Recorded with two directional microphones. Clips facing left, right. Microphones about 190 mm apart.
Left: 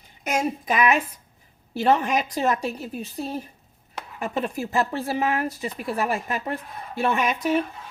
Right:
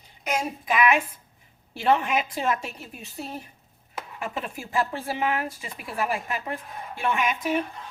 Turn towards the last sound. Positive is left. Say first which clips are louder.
# left 3 dB
turn(degrees=40)  # may be behind; listen again after turning